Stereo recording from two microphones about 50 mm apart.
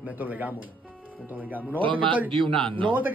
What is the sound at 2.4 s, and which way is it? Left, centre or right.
Speech, centre.